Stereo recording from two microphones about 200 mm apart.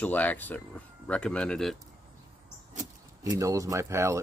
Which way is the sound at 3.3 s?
15° right (ahead or behind).